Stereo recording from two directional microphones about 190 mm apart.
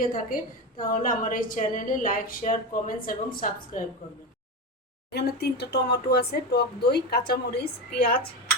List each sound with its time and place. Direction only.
0.0 s a woman's voice: 45° left (ahead or behind)
5.1 s speech: 60° left (ahead or behind)